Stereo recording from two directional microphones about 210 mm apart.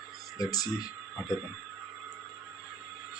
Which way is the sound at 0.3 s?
20° left (ahead or behind).